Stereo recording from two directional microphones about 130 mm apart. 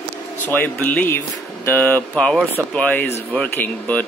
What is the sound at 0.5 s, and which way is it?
Speech, 15° left (ahead or behind).